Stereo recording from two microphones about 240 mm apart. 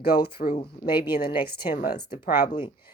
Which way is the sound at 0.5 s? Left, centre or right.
Left.